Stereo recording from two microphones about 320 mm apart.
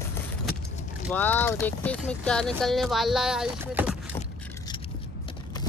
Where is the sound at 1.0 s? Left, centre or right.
Centre.